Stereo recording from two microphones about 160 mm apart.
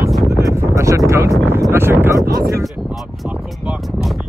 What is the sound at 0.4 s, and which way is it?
Speech, 20° right (ahead or behind).